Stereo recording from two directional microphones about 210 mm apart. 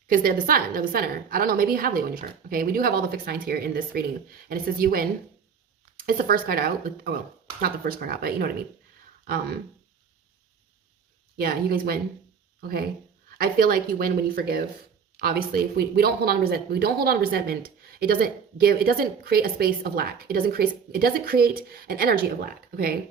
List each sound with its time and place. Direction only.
0.1 s speech: 40° right (ahead or behind)
6.1 s speech: 40° right (ahead or behind)
11.3 s speech: 45° right (ahead or behind)
13.4 s speech: 45° right (ahead or behind)